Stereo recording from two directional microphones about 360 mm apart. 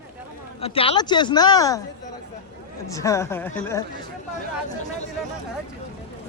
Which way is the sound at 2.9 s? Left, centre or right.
Centre.